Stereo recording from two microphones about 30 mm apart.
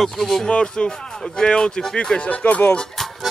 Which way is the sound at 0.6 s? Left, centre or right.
Left.